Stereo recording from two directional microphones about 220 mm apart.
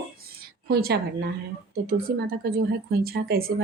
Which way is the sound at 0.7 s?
45° right (ahead or behind).